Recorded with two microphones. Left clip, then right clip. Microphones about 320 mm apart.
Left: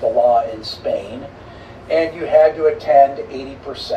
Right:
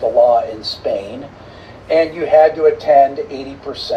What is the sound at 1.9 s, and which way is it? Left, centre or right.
Speech, centre.